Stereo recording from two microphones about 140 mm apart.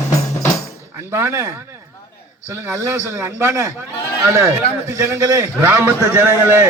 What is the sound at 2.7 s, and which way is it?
A man's voice, 20° right (ahead or behind).